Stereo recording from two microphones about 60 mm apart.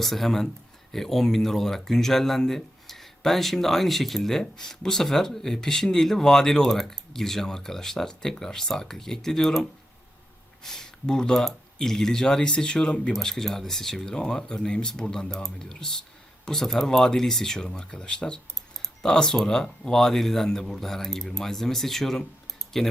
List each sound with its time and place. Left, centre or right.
0.0 s speech: centre
13.1 s speech: centre